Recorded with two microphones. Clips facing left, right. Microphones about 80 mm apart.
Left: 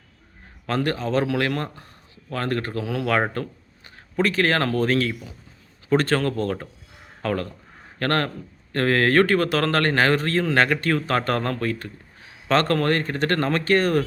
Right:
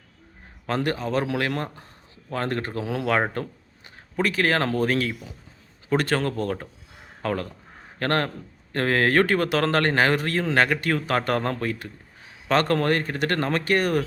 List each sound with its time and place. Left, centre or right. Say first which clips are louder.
0.7 s speech: left 2 dB; centre